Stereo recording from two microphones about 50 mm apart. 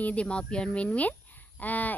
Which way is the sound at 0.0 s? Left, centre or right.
Left.